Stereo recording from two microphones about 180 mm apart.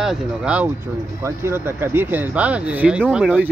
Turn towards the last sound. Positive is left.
turn(degrees=-5)  # may be behind; listen again after turning